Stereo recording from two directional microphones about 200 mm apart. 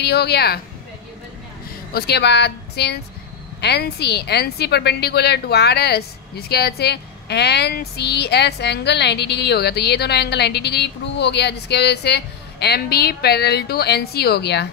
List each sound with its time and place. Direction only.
0.0 s speech: 55° left (ahead or behind)
1.9 s a woman's voice: 55° left (ahead or behind)